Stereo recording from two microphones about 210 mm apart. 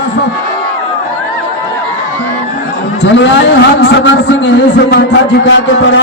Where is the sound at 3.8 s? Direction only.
55° left (ahead or behind).